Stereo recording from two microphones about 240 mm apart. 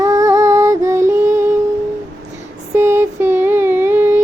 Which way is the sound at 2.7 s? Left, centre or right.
Centre.